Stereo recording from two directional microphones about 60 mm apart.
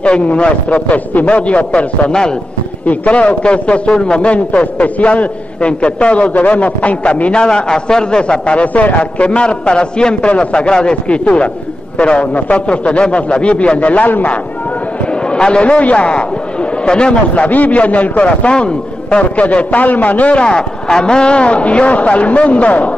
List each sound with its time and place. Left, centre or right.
0.0 s a man's voice: centre
15.3 s a man's voice: centre